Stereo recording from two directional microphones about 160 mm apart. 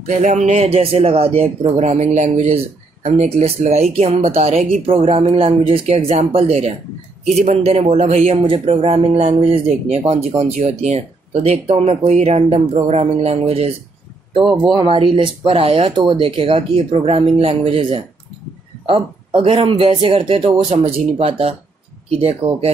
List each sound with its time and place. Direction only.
0.0 s speech: 50° right (ahead or behind)
14.4 s speech: 5° right (ahead or behind)
14.7 s speech: 30° right (ahead or behind)